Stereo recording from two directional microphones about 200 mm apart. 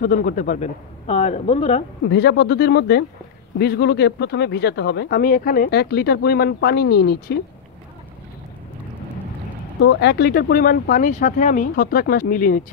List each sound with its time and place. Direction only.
0.0 s speech: 45° left (ahead or behind)
2.0 s speech: 55° left (ahead or behind)
9.8 s speech: 60° left (ahead or behind); by 12.7 s 40° left (ahead or behind)